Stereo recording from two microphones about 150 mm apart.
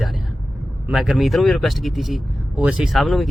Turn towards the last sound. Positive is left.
turn(degrees=0)  # may be behind; listen again after turning